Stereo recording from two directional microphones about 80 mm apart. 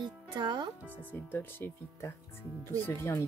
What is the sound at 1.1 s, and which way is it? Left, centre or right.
Speech, left.